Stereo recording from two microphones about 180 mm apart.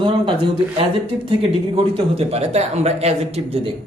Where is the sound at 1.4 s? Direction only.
35° right (ahead or behind).